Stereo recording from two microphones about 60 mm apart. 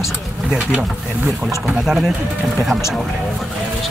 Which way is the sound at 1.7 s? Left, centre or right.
Centre.